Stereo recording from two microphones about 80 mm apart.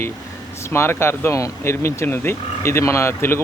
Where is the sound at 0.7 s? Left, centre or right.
Left.